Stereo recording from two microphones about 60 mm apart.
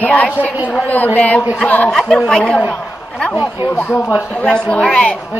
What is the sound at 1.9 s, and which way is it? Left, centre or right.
Speech, centre.